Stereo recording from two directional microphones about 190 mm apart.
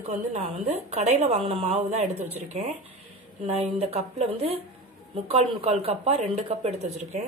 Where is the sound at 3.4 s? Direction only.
35° right (ahead or behind).